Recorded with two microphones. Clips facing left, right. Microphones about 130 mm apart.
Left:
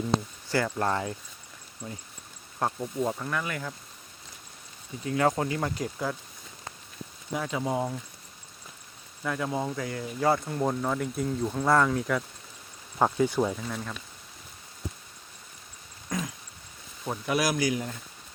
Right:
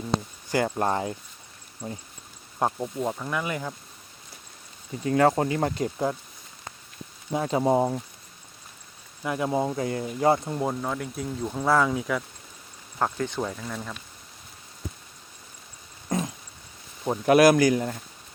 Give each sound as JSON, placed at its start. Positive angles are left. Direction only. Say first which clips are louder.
{"t": 0.6, "sound": "speech", "louder": "right 4 dB", "side_deg": -20}
{"t": 2.6, "sound": "speech", "louder": "right 3 dB", "side_deg": -20}
{"t": 3.0, "sound": "speech", "louder": "even", "side_deg": -5}
{"t": 5.0, "sound": "speech", "louder": "right 5 dB", "side_deg": -40}
{"t": 7.3, "sound": "speech", "louder": "right 7 dB", "side_deg": -35}
{"t": 9.2, "sound": "speech", "louder": "right 4 dB", "side_deg": -20}
{"t": 10.6, "sound": "speech", "louder": "left 1 dB", "side_deg": -5}
{"t": 13.0, "sound": "speech", "louder": "left 3 dB", "side_deg": 10}
{"t": 16.0, "sound": "a sound", "louder": "right 5 dB", "side_deg": -25}
{"t": 17.2, "sound": "speech", "louder": "right 10 dB", "side_deg": -60}